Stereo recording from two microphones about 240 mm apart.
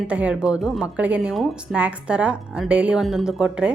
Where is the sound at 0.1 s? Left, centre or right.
Centre.